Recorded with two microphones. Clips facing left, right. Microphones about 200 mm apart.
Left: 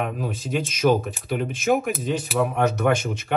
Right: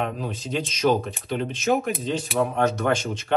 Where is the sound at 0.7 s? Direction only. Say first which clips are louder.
Left 2 dB; 50° left (ahead or behind).